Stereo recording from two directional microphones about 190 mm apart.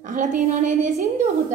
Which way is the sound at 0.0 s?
40° right (ahead or behind).